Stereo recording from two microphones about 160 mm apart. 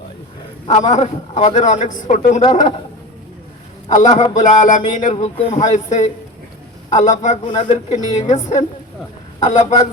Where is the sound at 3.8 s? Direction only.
50° left (ahead or behind).